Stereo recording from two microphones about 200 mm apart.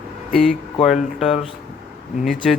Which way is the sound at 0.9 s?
Centre (ahead or behind).